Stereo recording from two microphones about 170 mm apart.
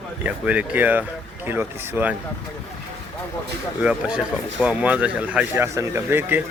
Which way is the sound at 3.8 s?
5° right (ahead or behind).